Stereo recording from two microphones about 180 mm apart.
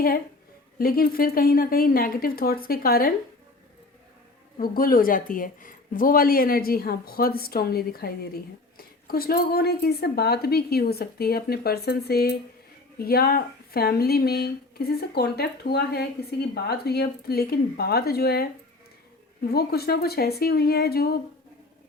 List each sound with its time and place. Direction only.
0.8 s speech: 55° left (ahead or behind)
4.5 s a woman's voice: 55° left (ahead or behind)